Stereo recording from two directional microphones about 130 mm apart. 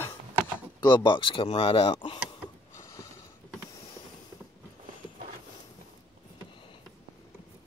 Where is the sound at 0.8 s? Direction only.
40° left (ahead or behind).